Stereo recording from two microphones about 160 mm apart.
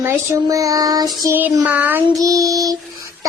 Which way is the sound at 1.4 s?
10° right (ahead or behind).